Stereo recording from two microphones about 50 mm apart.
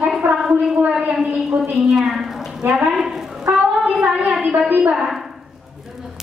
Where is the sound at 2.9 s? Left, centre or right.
Centre.